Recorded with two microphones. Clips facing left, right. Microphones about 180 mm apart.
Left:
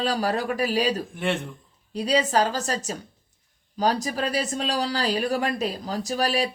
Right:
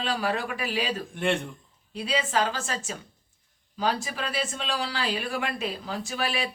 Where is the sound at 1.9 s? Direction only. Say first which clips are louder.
Left 5 dB; 40° left (ahead or behind).